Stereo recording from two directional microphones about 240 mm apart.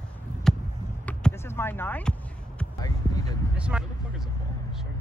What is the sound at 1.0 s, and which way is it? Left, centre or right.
Basketball bounce, centre.